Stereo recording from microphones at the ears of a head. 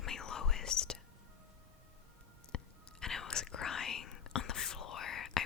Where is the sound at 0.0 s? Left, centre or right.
Left.